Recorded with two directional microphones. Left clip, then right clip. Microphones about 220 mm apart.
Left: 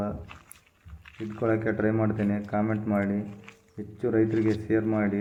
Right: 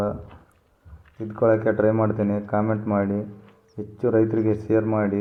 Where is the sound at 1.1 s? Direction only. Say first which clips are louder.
Right 4 dB; 50° left (ahead or behind).